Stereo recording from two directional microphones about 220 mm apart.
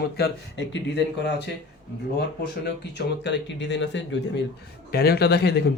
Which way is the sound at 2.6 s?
50° left (ahead or behind).